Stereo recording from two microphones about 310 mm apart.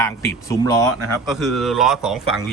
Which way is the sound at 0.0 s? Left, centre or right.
Centre.